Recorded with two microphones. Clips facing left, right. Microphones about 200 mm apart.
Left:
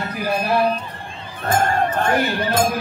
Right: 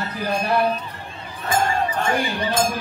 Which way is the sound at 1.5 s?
55° left (ahead or behind).